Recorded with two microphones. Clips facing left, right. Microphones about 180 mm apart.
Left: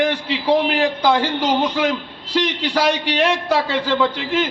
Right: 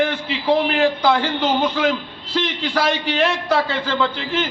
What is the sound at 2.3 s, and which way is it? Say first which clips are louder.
A man's voice: left 2 dB; 15° left (ahead or behind).